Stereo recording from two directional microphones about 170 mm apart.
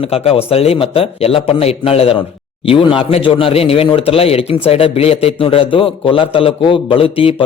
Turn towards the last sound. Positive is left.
turn(degrees=30)  # may be behind; listen again after turning